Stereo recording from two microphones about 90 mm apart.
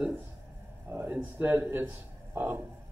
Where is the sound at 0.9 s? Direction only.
20° right (ahead or behind).